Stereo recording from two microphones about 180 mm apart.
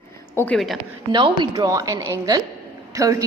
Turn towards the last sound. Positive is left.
turn(degrees=-20)  # may be behind; listen again after turning